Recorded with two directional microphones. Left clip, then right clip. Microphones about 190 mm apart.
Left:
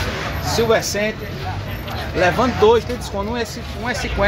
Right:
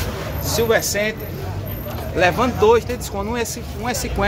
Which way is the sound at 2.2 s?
10° left (ahead or behind).